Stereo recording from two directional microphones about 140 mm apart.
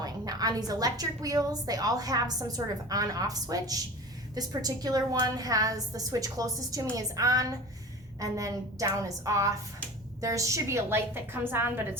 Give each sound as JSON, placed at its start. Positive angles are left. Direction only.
{"t": 0.0, "sound": "a woman's voice", "side_deg": -25}